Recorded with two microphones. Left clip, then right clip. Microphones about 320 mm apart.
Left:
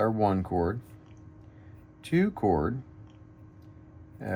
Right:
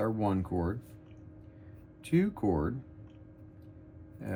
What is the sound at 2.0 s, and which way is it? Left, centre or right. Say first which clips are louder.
Speech: left 3 dB; left.